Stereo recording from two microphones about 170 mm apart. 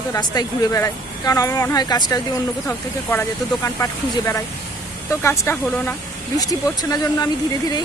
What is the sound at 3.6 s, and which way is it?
Speech, 20° left (ahead or behind).